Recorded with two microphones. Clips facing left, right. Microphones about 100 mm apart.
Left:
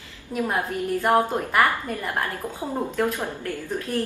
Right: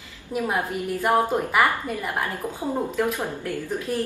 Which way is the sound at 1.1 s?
15° right (ahead or behind).